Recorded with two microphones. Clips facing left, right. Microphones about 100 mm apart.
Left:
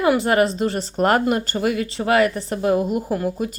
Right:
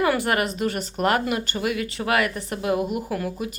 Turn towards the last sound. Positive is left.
turn(degrees=30)  # may be behind; listen again after turning